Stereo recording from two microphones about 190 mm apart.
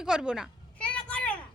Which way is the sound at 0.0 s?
5° right (ahead or behind).